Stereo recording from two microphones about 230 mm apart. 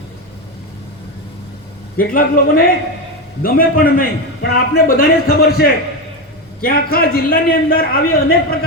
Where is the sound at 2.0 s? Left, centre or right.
Left.